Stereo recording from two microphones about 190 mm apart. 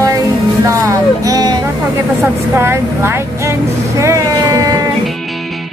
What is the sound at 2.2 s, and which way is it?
Vehicle, 15° right (ahead or behind).